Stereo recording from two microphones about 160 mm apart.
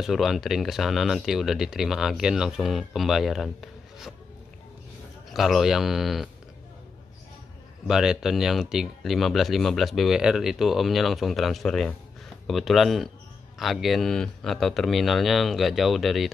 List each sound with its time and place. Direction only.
0.0 s speech: centre (ahead or behind)
5.3 s speech: centre (ahead or behind)
7.8 s speech: 5° right (ahead or behind)